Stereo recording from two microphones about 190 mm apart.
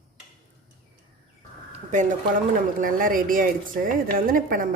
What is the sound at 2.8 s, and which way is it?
A woman's voice, 45° right (ahead or behind).